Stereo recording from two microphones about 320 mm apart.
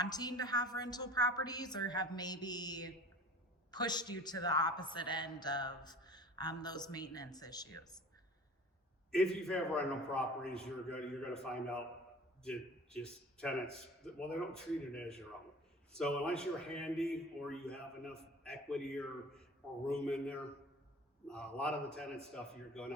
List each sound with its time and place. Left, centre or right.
0.0 s a man's voice: centre
9.1 s a man's voice: centre